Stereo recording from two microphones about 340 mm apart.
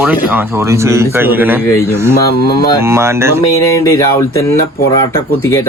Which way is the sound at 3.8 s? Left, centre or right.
Centre.